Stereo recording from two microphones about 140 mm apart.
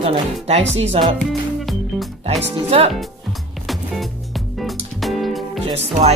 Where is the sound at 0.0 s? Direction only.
45° right (ahead or behind).